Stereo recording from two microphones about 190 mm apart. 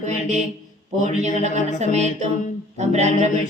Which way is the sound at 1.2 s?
35° right (ahead or behind).